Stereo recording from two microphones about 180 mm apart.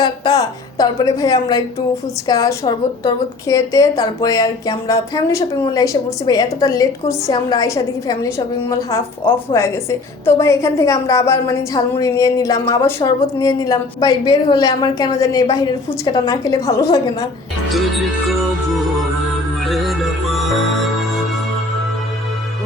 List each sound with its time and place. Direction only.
0.0 s a woman's voice: 20° left (ahead or behind)
9.3 s a woman's voice: 15° left (ahead or behind)
17.7 s speech: centre (ahead or behind)
19.6 s music: centre (ahead or behind)